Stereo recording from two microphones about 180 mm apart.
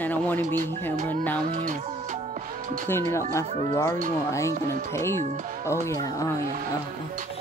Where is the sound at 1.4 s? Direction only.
45° right (ahead or behind).